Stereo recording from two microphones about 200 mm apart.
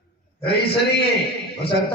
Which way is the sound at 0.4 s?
55° left (ahead or behind).